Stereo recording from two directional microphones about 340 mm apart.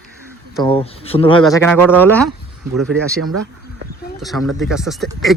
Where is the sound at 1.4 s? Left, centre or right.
Centre.